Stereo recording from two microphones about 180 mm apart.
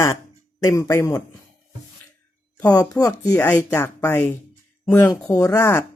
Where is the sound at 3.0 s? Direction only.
10° left (ahead or behind).